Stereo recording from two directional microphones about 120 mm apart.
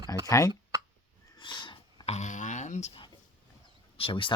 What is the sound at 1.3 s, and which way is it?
Sniff, 40° left (ahead or behind).